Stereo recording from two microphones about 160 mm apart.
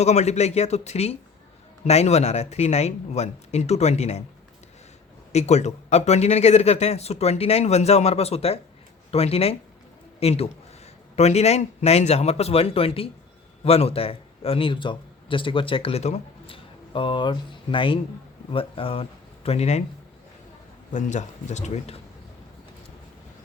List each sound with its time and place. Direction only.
0.0 s a man's voice: 45° left (ahead or behind)
5.3 s a man's voice: 45° left (ahead or behind)
16.9 s a man's voice: 30° left (ahead or behind)
20.9 s a man's voice: 50° left (ahead or behind)